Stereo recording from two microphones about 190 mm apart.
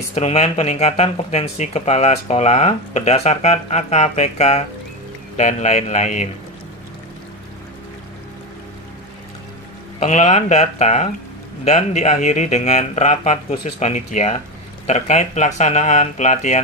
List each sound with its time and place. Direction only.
0.1 s speech: 35° left (ahead or behind)
9.9 s speech: 40° left (ahead or behind)